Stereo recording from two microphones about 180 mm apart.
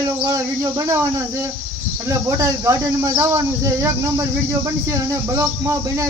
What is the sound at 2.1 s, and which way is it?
Speech, 15° right (ahead or behind).